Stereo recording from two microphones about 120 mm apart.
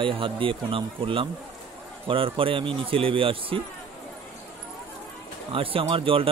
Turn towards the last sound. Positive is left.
turn(degrees=-50)  # may be behind; listen again after turning